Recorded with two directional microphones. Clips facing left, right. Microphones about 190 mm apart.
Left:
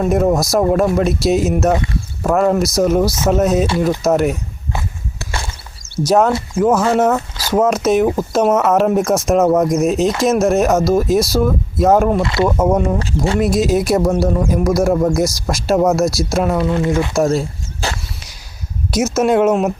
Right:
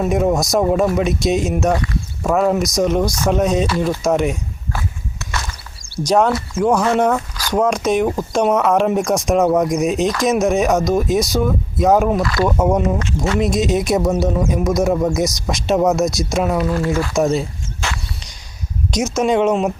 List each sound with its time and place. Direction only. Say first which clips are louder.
0.0 s speech: left 2 dB; centre (ahead or behind)
5.2 s a sound: left 1 dB; 30° left (ahead or behind)
6.1 s speech: left 2 dB; 5° left (ahead or behind)
12.2 s speech: left 2 dB; 25° left (ahead or behind)
12.5 s speech: even; centre (ahead or behind)
16.6 s speech: left 2 dB; 20° left (ahead or behind)
17.2 s speech: left 1 dB; centre (ahead or behind)
17.7 s a sound: left 3 dB; 35° left (ahead or behind)
18.9 s speech: left 3 dB; 5° left (ahead or behind)